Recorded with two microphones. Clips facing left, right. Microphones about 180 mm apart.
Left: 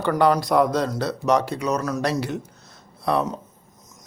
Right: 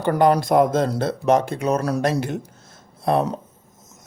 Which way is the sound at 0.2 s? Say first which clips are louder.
Right 2 dB; 50° right (ahead or behind).